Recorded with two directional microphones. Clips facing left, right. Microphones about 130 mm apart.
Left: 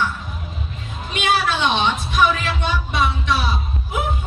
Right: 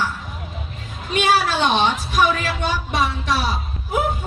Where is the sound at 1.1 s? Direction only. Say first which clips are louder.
Right 2 dB; 40° right (ahead or behind).